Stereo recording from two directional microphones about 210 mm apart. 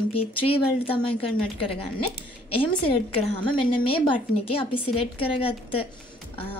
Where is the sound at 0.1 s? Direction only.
25° left (ahead or behind).